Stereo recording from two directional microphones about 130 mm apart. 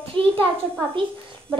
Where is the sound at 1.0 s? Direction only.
40° right (ahead or behind).